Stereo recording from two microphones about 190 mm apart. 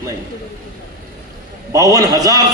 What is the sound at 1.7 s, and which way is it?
Speech, 15° right (ahead or behind).